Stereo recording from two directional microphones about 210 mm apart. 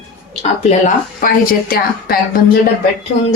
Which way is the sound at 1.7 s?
45° left (ahead or behind).